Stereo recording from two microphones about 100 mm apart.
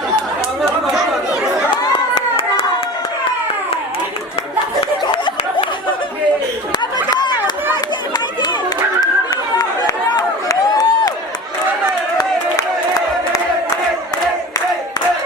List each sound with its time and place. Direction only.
1.9 s clapping: 65° left (ahead or behind)
7.1 s chatter: 45° left (ahead or behind)
9.6 s a sound: 35° left (ahead or behind)